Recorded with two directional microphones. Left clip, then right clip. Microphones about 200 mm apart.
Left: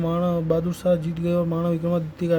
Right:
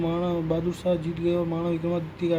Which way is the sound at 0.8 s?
70° left (ahead or behind).